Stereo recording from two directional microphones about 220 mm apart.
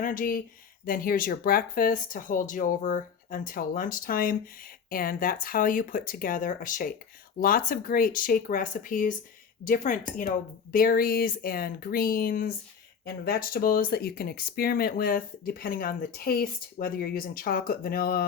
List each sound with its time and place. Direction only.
0.0 s speech: 40° left (ahead or behind)